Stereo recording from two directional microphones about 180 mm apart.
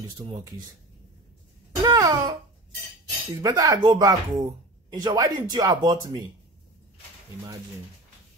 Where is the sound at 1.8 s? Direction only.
20° right (ahead or behind).